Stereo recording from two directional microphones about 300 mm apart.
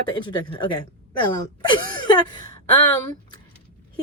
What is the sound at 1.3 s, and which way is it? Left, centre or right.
Speech, centre.